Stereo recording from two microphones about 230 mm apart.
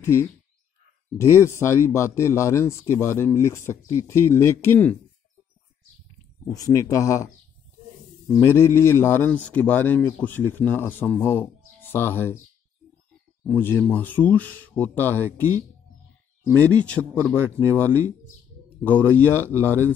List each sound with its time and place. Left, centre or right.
0.0 s speech: centre
6.5 s speech: centre
8.3 s speech: centre
13.4 s speech: centre
16.6 s speech: centre